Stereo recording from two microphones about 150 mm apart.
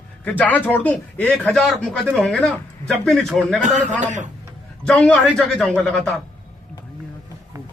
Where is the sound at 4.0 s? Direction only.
55° right (ahead or behind).